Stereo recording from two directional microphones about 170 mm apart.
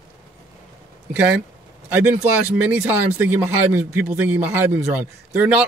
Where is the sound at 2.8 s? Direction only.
10° right (ahead or behind).